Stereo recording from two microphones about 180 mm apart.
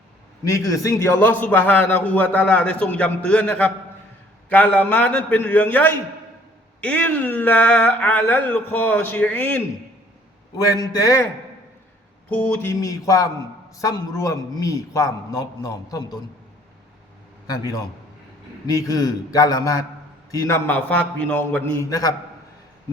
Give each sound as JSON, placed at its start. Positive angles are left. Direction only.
{"t": 0.4, "sound": "a man's voice", "side_deg": 15}
{"t": 12.3, "sound": "a man's voice", "side_deg": 5}
{"t": 18.6, "sound": "a man's voice", "side_deg": 20}